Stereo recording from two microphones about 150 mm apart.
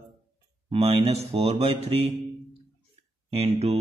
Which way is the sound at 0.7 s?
40° right (ahead or behind).